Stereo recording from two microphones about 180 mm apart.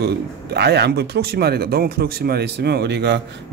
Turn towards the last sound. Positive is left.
turn(degrees=-70)  # may be behind; listen again after turning